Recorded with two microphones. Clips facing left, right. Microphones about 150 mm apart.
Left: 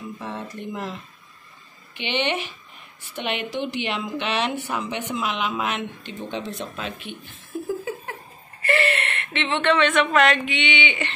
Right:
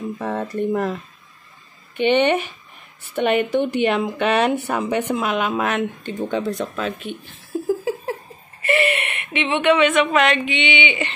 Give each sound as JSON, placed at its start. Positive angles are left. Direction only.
{"t": 0.2, "sound": "speech", "side_deg": -45}
{"t": 2.0, "sound": "speech", "side_deg": -45}
{"t": 7.6, "sound": "laughter", "side_deg": -30}
{"t": 8.6, "sound": "speech", "side_deg": -20}